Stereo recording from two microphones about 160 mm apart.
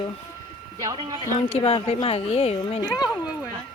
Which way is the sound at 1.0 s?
30° right (ahead or behind).